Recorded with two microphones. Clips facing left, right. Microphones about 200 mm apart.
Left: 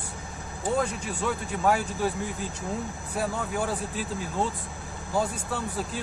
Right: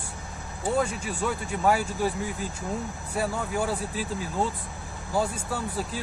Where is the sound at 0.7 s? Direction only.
5° right (ahead or behind).